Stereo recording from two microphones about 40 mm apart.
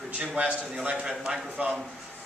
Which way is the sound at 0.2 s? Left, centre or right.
Right.